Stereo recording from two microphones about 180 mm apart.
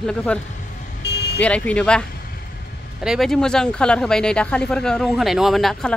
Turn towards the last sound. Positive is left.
turn(degrees=0)  # may be behind; listen again after turning